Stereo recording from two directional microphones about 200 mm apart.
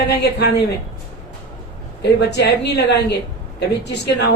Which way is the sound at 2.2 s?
55° left (ahead or behind).